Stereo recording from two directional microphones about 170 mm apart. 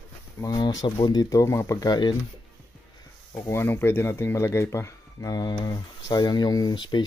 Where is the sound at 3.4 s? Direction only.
15° left (ahead or behind).